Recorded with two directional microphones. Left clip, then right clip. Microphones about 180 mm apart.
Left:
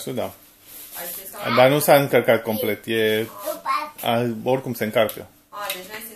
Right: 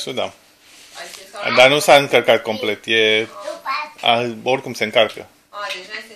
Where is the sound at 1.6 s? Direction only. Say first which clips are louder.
Right 4 dB; 10° right (ahead or behind).